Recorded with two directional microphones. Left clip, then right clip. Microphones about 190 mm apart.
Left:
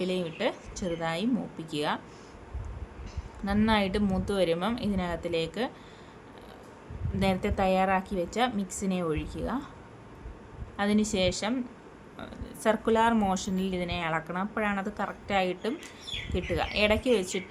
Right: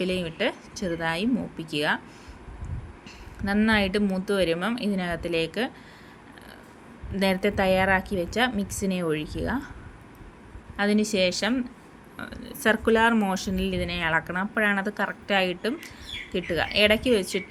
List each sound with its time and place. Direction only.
0.0 s speech: 5° right (ahead or behind)
3.4 s speech: 5° right (ahead or behind)
7.2 s a woman's voice: 5° right (ahead or behind)
10.8 s speech: 5° right (ahead or behind)